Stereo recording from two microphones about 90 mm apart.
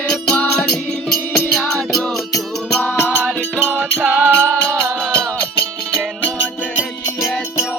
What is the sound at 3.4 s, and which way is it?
Music, 20° right (ahead or behind).